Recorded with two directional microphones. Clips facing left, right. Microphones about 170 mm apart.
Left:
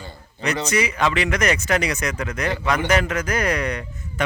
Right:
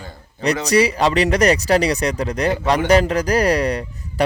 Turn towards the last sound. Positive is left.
turn(degrees=-35)  # may be behind; listen again after turning